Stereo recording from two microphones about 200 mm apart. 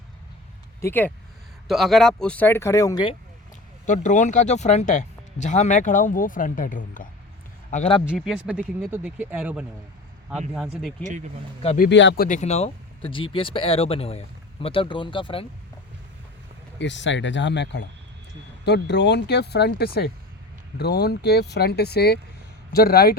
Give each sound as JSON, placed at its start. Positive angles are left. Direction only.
{"t": 0.8, "sound": "speech", "side_deg": 10}
{"t": 1.6, "sound": "speech", "side_deg": 0}
{"t": 3.8, "sound": "speech", "side_deg": 40}
{"t": 8.1, "sound": "speech", "side_deg": -5}
{"t": 11.0, "sound": "speech", "side_deg": -35}
{"t": 11.6, "sound": "speech", "side_deg": 35}
{"t": 11.9, "sound": "speech", "side_deg": 60}
{"t": 16.7, "sound": "speech", "side_deg": 65}